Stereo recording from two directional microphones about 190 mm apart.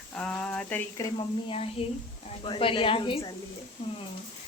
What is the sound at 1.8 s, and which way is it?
A woman's voice, 30° left (ahead or behind).